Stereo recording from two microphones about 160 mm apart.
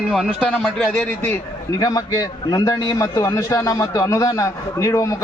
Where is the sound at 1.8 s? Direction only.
25° left (ahead or behind).